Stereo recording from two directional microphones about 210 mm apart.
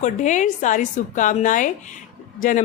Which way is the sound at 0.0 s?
35° left (ahead or behind).